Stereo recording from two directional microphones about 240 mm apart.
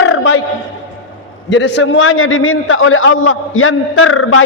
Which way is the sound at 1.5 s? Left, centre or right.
Left.